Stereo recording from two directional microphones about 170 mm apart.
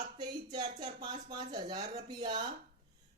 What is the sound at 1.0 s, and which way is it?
Speech, 25° right (ahead or behind).